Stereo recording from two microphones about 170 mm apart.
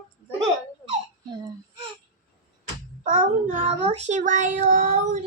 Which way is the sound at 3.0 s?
50° right (ahead or behind).